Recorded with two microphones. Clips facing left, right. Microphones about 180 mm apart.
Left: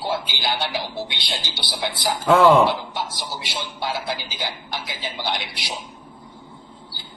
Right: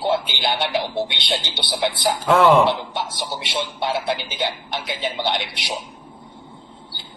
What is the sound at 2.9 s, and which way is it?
Speech, 25° right (ahead or behind).